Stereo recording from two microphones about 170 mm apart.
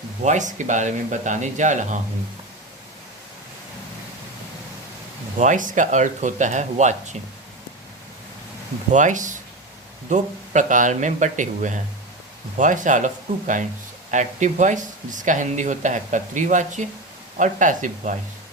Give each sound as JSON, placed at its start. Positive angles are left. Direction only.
{"t": 0.2, "sound": "speech", "side_deg": -45}
{"t": 5.4, "sound": "speech", "side_deg": -50}
{"t": 8.9, "sound": "speech", "side_deg": -45}
{"t": 14.1, "sound": "speech", "side_deg": -45}